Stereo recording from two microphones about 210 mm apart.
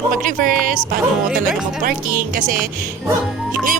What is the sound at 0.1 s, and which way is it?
Speech, 40° right (ahead or behind).